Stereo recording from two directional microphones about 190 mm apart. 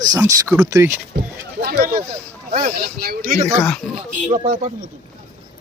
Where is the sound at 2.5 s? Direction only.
40° right (ahead or behind).